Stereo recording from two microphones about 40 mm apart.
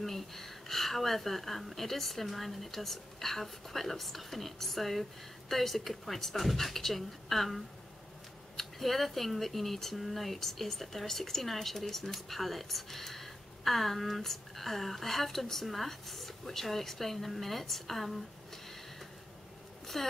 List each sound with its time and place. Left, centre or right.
0.0 s speech: centre
19.9 s speech: centre